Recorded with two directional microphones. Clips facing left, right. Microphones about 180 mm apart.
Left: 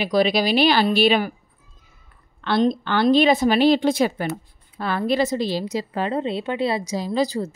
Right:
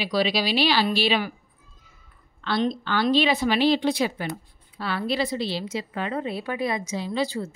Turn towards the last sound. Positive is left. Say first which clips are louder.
# left 4 dB
turn(degrees=40)  # may be behind; listen again after turning